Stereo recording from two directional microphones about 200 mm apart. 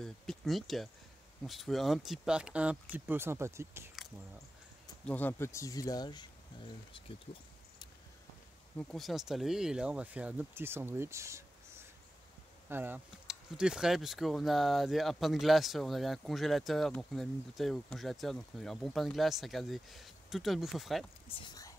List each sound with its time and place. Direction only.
0.0 s speech: centre (ahead or behind)
5.0 s speech: 10° left (ahead or behind); by 7.0 s 25° left (ahead or behind)
8.7 s speech: centre (ahead or behind)
12.6 s speech: 10° right (ahead or behind)
21.4 s whispering: 20° left (ahead or behind)